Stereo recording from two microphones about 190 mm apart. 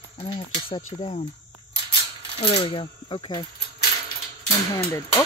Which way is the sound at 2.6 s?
25° left (ahead or behind).